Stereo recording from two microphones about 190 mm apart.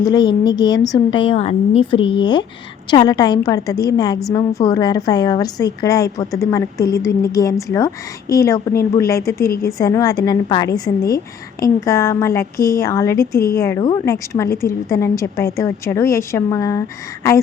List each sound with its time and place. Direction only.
0.0 s a woman's voice: 20° left (ahead or behind)